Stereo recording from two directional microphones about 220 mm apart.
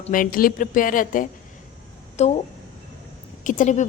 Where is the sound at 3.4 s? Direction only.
35° left (ahead or behind).